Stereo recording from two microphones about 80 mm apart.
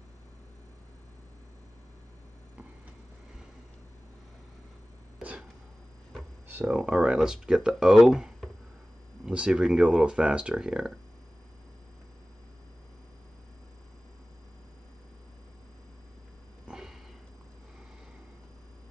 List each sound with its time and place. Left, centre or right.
6.4 s a sound: right
6.7 s speech: centre
9.3 s speech: centre
16.6 s sniff: centre